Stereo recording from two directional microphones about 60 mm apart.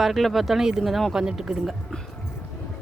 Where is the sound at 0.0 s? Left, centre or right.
Centre.